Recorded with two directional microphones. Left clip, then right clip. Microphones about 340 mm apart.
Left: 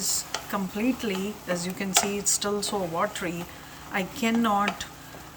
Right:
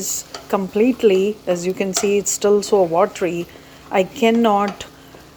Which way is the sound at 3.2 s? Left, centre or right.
Right.